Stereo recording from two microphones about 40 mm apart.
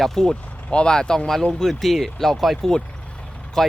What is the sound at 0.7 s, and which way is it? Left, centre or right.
Speech, left.